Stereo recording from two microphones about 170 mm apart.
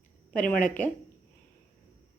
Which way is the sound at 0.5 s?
50° left (ahead or behind).